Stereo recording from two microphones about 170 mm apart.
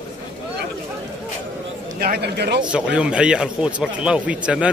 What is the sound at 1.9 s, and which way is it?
Speech, 60° right (ahead or behind).